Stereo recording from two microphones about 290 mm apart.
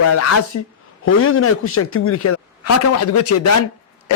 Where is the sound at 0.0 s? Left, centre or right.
Left.